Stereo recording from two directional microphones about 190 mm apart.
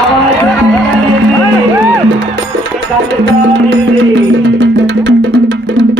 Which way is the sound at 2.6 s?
70° right (ahead or behind).